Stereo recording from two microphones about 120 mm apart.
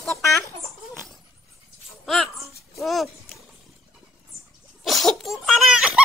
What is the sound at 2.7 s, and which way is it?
Speech, centre (ahead or behind).